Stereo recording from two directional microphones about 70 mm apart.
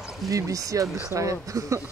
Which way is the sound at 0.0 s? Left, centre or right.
Centre.